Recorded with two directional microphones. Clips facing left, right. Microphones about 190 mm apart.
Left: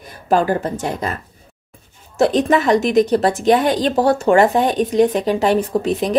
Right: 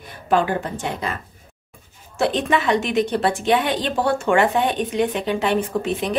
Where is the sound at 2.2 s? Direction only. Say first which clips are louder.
Left 5 dB; 40° left (ahead or behind).